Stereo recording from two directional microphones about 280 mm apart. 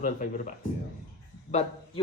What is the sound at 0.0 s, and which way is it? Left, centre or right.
Speech, left.